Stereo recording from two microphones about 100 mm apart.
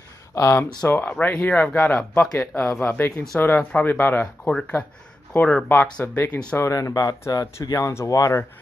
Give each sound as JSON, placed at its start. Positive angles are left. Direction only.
{"t": 0.3, "sound": "speech", "side_deg": 30}
{"t": 6.7, "sound": "speech", "side_deg": 40}